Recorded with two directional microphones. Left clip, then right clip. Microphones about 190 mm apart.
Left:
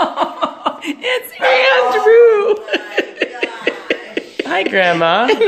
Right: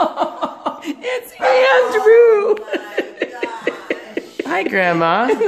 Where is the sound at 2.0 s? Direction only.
10° left (ahead or behind).